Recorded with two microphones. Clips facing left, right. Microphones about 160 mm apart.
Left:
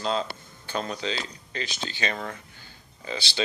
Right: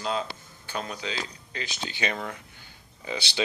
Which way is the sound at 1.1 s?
15° right (ahead or behind).